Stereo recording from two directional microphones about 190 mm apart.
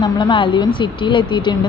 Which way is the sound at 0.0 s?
25° left (ahead or behind).